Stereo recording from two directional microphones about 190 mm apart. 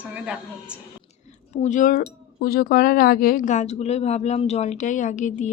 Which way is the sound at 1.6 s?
40° left (ahead or behind).